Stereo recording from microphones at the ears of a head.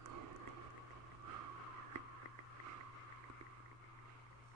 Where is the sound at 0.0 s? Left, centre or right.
Right.